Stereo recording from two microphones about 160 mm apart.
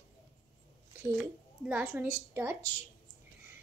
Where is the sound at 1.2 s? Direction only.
5° right (ahead or behind).